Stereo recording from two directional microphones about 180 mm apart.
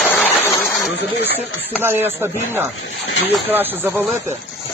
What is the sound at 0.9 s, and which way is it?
Snake, 70° left (ahead or behind).